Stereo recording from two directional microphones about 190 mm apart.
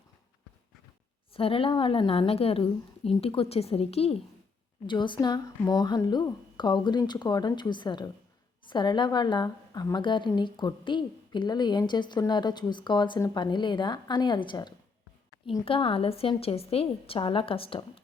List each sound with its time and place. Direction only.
1.3 s a woman's voice: 30° left (ahead or behind)